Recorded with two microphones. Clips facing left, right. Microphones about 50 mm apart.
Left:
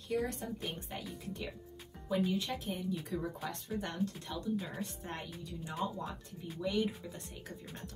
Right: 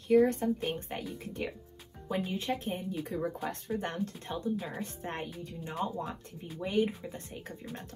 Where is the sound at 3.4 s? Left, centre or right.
Right.